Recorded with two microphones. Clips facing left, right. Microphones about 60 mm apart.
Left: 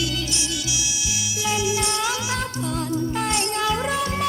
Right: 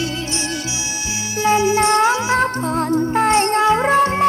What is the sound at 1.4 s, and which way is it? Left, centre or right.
Music, right.